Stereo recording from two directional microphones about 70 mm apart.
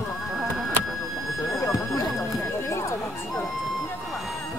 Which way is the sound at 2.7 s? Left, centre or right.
Left.